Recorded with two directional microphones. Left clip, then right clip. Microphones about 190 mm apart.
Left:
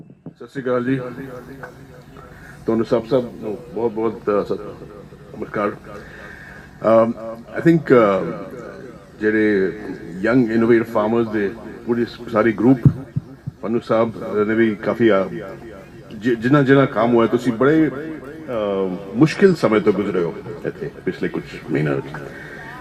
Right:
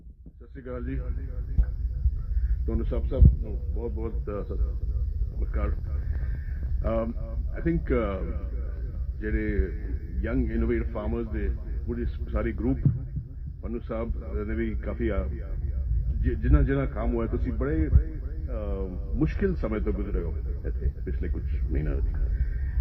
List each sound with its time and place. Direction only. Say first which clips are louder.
0.5 s a man's voice: left 17 dB; 35° right (ahead or behind)
2.6 s a man's voice: left 16 dB; 35° right (ahead or behind)
6.8 s a man's voice: left 16 dB; 35° right (ahead or behind)